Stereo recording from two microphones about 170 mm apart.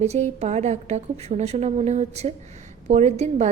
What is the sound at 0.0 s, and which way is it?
A woman's voice, 40° right (ahead or behind).